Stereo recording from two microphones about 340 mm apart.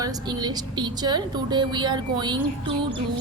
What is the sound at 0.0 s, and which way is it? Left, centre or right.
A woman's voice, centre.